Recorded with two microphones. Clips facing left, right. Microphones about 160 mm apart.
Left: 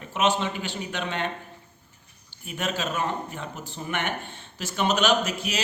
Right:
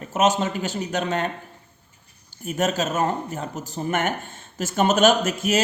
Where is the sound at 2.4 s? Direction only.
45° right (ahead or behind).